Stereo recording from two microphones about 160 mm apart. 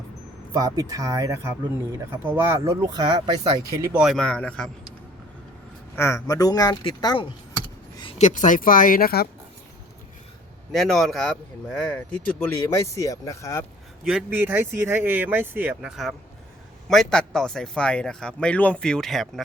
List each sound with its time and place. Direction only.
0.5 s speech: 20° right (ahead or behind)
4.0 s speech: centre (ahead or behind)
6.0 s speech: 15° left (ahead or behind)
8.2 s speech: 50° left (ahead or behind); by 9.3 s 70° left (ahead or behind)
10.7 s speech: centre (ahead or behind)
12.8 s speech: 20° left (ahead or behind)
14.0 s speech: 5° right (ahead or behind)